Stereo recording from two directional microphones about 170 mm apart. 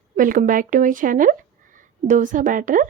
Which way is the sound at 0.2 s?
55° right (ahead or behind).